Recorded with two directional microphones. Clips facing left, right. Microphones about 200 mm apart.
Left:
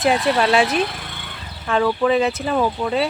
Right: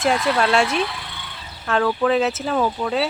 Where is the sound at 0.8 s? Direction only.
45° left (ahead or behind).